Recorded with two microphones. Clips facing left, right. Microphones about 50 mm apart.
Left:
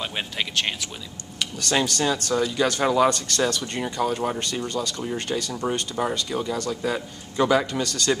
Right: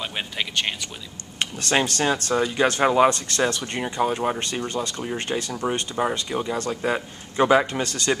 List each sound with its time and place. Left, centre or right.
0.0 s speech: centre
1.4 s speech: right